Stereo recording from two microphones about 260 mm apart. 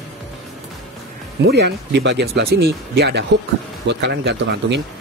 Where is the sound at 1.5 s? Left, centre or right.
Right.